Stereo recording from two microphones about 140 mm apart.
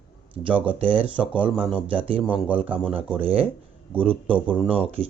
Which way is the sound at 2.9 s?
40° right (ahead or behind).